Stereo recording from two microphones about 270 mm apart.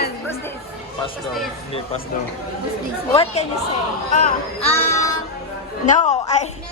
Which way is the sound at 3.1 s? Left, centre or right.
Left.